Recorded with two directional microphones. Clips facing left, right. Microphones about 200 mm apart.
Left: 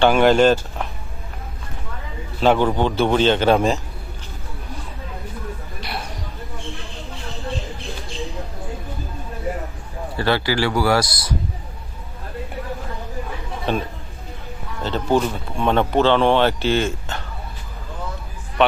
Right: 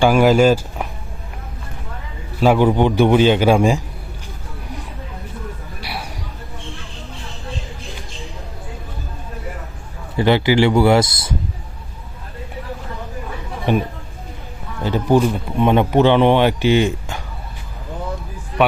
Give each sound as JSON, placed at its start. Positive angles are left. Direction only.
{"t": 0.0, "sound": "speech", "side_deg": -5}
{"t": 2.4, "sound": "speech", "side_deg": -10}
{"t": 5.8, "sound": "a sound", "side_deg": -10}
{"t": 10.2, "sound": "speech", "side_deg": -20}
{"t": 13.7, "sound": "speech", "side_deg": -15}